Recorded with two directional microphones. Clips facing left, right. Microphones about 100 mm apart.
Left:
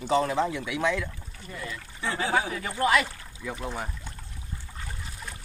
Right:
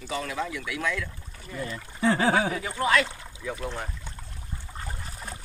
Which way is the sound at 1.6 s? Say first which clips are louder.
Right 8 dB; 40° right (ahead or behind).